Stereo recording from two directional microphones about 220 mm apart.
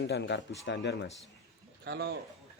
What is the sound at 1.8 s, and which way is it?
Speech, 50° right (ahead or behind).